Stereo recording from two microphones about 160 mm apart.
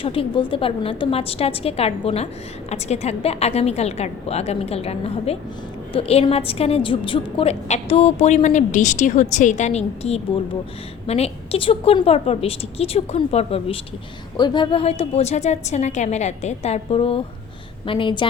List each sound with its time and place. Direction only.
0.0 s a woman's voice: 35° left (ahead or behind)
14.3 s a woman's voice: 30° left (ahead or behind)